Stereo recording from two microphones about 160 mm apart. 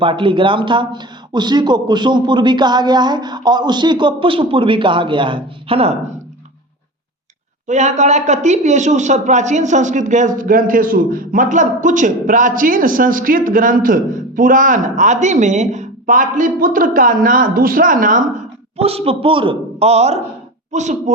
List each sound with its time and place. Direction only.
0.0 s a man's voice: 30° right (ahead or behind)
7.7 s a woman's voice: 45° right (ahead or behind)
18.8 s a man's voice: 40° right (ahead or behind)